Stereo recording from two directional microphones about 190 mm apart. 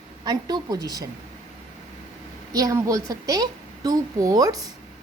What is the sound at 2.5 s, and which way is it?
A woman's voice, 20° right (ahead or behind).